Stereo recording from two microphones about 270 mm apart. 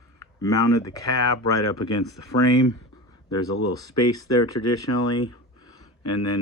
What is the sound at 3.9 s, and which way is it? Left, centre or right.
Speech, left.